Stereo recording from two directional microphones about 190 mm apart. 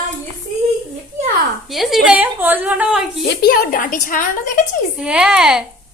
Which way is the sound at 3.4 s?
50° left (ahead or behind).